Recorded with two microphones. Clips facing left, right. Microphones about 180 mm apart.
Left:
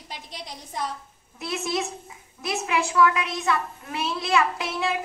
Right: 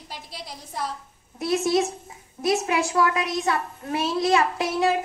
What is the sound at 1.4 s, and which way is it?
A child's voice, 35° right (ahead or behind).